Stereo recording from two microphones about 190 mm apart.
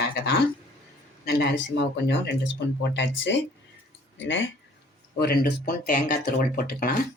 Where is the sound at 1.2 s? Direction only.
55° left (ahead or behind); by 4.5 s 80° left.